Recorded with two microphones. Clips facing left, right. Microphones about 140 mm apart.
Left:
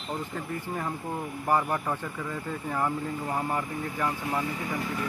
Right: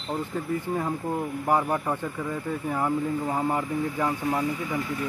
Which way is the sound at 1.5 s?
15° right (ahead or behind).